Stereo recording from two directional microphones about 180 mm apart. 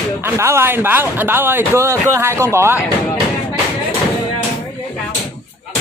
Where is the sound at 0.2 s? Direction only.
15° right (ahead or behind).